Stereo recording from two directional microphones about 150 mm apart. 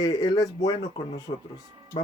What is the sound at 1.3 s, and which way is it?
Speech, 40° left (ahead or behind).